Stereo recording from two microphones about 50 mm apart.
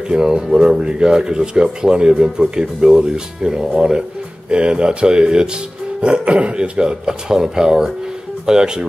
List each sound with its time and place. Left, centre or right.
0.1 s speech: centre